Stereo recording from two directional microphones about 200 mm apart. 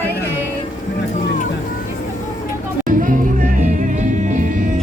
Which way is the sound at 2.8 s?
40° right (ahead or behind).